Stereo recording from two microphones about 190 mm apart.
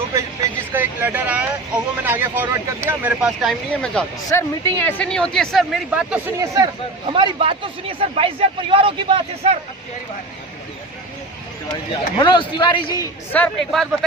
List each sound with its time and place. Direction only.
0.7 s speech: 10° right (ahead or behind)
7.1 s speech: 25° right (ahead or behind)
12.1 s a man's voice: 25° left (ahead or behind)
13.3 s speech: 10° left (ahead or behind)